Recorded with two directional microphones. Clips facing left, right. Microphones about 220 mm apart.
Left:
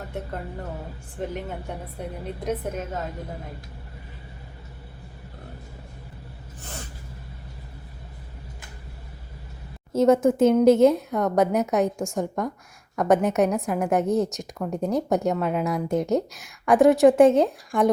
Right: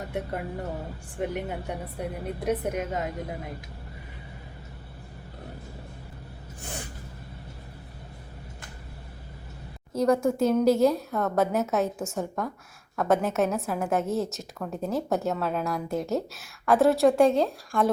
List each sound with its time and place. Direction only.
1.2 s a woman's voice: 10° right (ahead or behind)
6.6 s gasp: 15° right (ahead or behind)
9.9 s speech: 25° left (ahead or behind)